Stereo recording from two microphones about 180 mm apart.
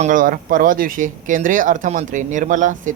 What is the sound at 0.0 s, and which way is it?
Speech, 50° right (ahead or behind).